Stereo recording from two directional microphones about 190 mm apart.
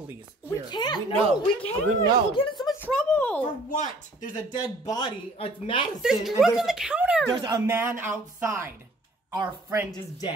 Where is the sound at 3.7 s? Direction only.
40° left (ahead or behind).